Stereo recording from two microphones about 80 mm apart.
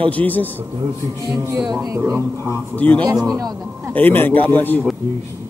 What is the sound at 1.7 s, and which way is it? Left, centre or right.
Speech, right.